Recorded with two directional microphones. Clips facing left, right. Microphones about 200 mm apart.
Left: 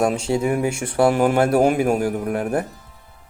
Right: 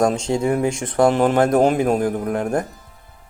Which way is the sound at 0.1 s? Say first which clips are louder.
Right 1 dB; 10° left (ahead or behind).